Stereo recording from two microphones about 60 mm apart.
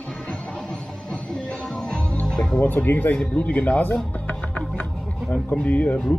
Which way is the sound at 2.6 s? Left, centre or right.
Left.